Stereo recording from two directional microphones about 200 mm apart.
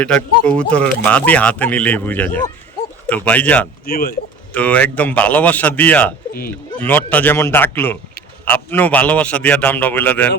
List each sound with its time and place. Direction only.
0.0 s speech: 5° left (ahead or behind)
3.8 s speech: 50° left (ahead or behind)
4.5 s speech: 5° left (ahead or behind)